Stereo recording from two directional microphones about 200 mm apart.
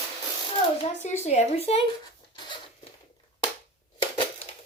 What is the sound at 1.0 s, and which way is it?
Speech, 35° left (ahead or behind).